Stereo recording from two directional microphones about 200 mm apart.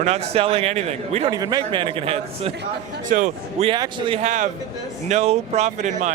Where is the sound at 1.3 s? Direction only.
20° right (ahead or behind).